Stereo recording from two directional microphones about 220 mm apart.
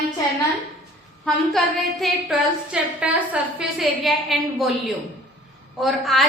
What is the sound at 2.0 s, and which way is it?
A woman's voice, 5° right (ahead or behind).